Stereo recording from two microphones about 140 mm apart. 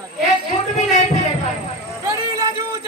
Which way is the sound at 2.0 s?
25° right (ahead or behind).